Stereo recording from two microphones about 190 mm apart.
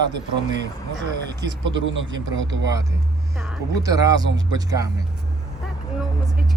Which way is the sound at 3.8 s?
20° right (ahead or behind).